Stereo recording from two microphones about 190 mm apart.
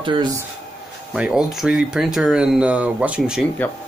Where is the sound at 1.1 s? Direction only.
5° right (ahead or behind).